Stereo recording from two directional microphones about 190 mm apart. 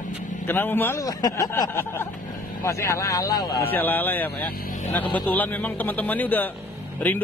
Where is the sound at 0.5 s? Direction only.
10° left (ahead or behind).